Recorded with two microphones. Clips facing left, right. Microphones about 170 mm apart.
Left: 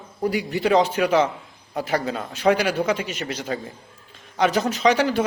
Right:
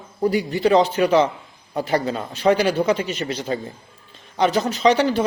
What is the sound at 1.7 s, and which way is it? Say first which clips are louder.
Speech: right 3 dB; 30° right (ahead or behind).